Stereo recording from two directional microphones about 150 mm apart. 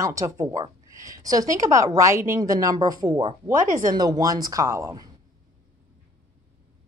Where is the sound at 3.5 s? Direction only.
60° right (ahead or behind).